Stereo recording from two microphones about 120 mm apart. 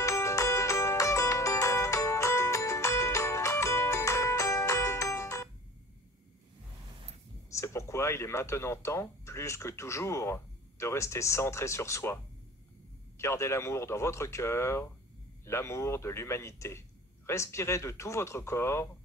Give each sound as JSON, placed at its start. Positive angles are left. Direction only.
{"t": 0.0, "sound": "music", "side_deg": 25}
{"t": 7.5, "sound": "speech", "side_deg": 25}
{"t": 13.2, "sound": "speech", "side_deg": 20}